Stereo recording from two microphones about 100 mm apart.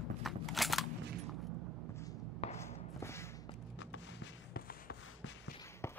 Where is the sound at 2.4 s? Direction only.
90° left.